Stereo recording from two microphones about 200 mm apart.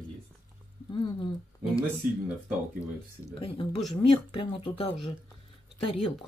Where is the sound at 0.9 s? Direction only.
25° left (ahead or behind).